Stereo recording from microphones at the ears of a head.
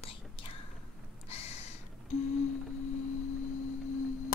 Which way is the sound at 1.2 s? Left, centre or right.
Left.